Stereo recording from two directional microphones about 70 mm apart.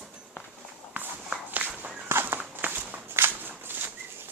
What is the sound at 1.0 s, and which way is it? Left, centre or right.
Walk, right.